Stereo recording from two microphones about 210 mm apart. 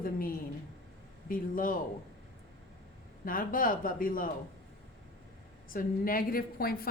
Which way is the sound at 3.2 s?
40° left (ahead or behind).